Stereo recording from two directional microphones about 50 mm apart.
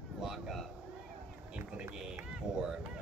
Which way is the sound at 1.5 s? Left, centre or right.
Centre.